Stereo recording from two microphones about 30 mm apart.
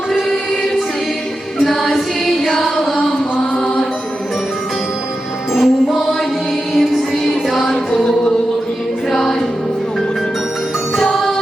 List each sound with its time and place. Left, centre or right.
1.5 s music: centre
5.5 s music: centre
7.6 s music: centre
9.1 s music: centre